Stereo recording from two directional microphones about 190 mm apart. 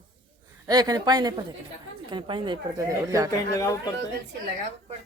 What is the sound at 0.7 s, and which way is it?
Speech, 20° right (ahead or behind).